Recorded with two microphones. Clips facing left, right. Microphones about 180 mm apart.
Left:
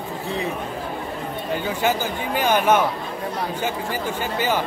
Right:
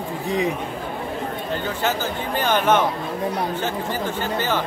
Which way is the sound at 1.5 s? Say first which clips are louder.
Left 3 dB; 10° left (ahead or behind).